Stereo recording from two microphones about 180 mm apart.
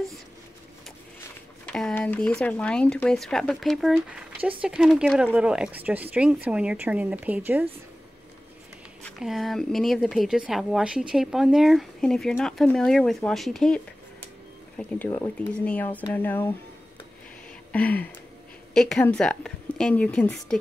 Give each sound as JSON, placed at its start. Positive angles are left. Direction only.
{"t": 1.7, "sound": "speech", "side_deg": 5}
{"t": 9.0, "sound": "speech", "side_deg": 0}
{"t": 14.8, "sound": "speech", "side_deg": 5}
{"t": 17.7, "sound": "speech", "side_deg": 10}